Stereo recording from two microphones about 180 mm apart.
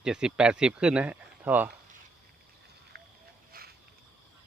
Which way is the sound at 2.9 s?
65° right (ahead or behind).